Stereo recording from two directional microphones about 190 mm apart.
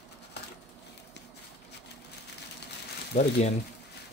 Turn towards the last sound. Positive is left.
turn(degrees=35)  # may be behind; listen again after turning